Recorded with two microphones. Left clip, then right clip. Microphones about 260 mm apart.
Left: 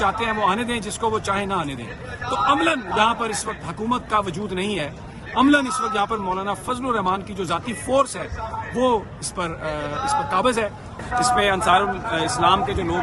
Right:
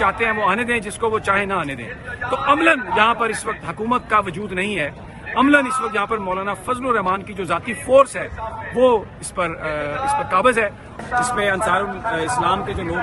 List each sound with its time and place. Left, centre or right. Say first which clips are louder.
0.0 s a man's voice: right 2 dB; centre
11.3 s speech: left 3 dB; left